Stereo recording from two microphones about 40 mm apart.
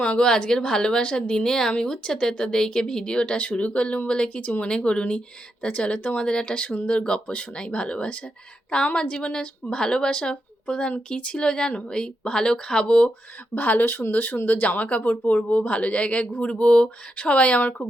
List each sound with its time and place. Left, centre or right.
0.0 s speech: left
3.3 s speech: left
4.4 s speech: left
4.7 s speech: left
13.5 s speech: left